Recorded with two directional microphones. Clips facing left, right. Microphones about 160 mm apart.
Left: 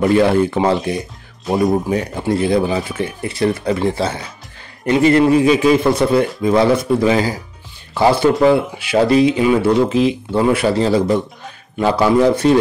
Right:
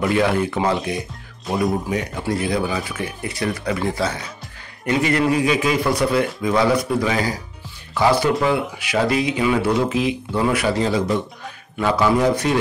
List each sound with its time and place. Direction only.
0.0 s a man's voice: 30° left (ahead or behind)
0.9 s music: centre (ahead or behind)
1.7 s a man's voice: 30° left (ahead or behind)